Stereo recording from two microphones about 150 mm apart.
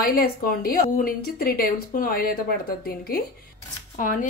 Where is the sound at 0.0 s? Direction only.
80° left.